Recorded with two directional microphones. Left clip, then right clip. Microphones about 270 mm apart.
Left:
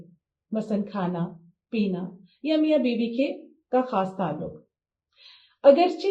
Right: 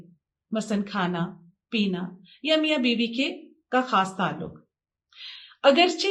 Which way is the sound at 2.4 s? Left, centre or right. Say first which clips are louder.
Even; right.